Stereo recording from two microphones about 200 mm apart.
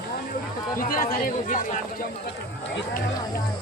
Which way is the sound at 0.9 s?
45° left (ahead or behind).